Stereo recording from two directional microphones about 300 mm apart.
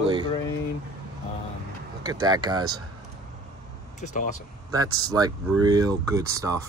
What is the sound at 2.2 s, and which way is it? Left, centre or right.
Speech, centre.